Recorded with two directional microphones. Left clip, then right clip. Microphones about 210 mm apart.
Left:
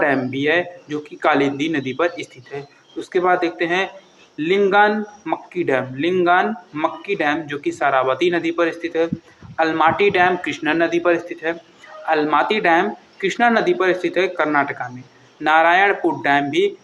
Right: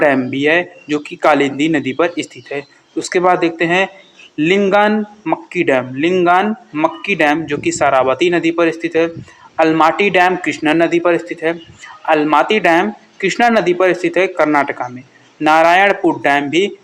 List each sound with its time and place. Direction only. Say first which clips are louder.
0.0 s a man's voice: right 5 dB; 55° right (ahead or behind)
14.3 s a man's voice: right 5 dB; 50° right (ahead or behind)